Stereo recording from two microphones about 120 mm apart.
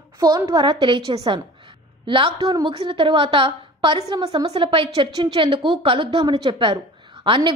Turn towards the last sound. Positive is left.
turn(degrees=-45)  # may be behind; listen again after turning